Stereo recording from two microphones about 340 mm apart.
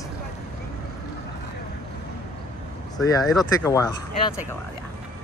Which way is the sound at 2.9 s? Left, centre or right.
Centre.